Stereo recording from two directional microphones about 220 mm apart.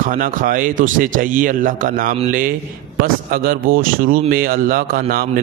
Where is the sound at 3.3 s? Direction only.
40° right (ahead or behind).